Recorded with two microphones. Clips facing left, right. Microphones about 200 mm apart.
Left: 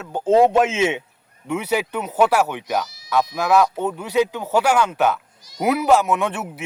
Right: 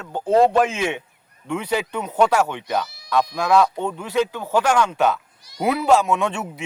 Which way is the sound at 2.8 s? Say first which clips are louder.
Right 1 dB; 60° right (ahead or behind).